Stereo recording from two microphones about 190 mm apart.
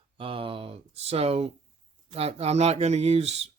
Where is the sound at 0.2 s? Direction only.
30° right (ahead or behind).